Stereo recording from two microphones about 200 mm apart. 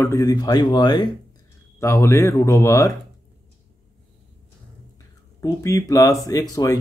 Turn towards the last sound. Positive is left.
turn(degrees=15)  # may be behind; listen again after turning